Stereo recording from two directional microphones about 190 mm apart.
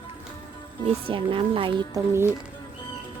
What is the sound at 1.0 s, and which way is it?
Speech, 30° right (ahead or behind).